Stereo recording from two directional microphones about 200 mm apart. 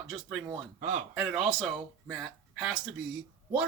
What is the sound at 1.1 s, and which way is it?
Speech, 5° right (ahead or behind).